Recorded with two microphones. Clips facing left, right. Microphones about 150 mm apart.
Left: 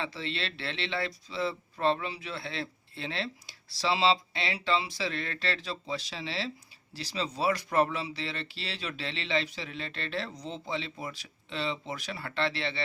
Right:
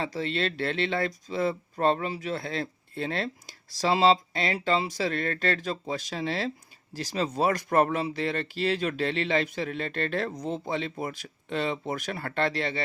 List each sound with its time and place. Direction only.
0.0 s speech: 45° right (ahead or behind)